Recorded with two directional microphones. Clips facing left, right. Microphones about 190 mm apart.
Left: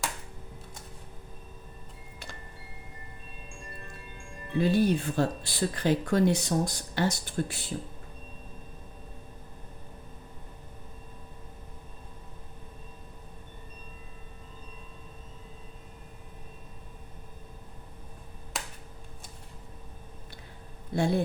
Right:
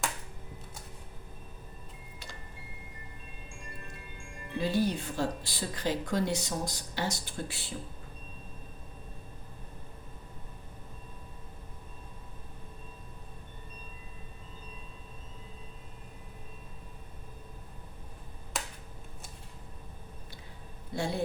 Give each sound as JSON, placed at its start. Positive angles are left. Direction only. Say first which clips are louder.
{"t": 4.5, "sound": "speech", "louder": "left 5 dB", "side_deg": 55}
{"t": 18.5, "sound": "finger snapping", "louder": "right 1 dB", "side_deg": 0}
{"t": 20.9, "sound": "a sound", "louder": "left 6 dB", "side_deg": 55}